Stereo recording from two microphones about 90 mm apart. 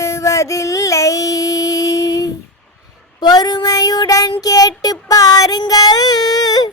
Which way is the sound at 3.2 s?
50° left (ahead or behind).